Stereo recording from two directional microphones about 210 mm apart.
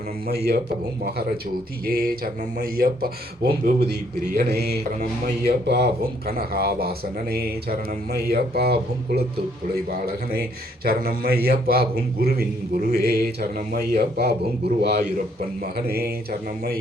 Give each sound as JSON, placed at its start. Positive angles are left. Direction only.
{"t": 1.8, "sound": "a man's voice", "side_deg": -45}
{"t": 10.8, "sound": "a man's voice", "side_deg": -45}